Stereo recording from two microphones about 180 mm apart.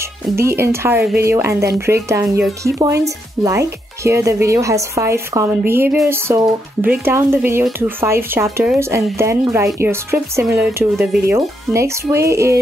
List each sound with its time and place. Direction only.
0.4 s speech: 15° right (ahead or behind)